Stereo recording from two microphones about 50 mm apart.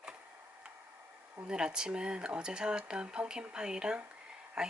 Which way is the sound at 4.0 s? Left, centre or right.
Right.